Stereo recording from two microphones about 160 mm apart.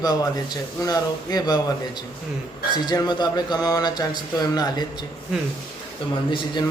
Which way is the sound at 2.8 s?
25° left (ahead or behind).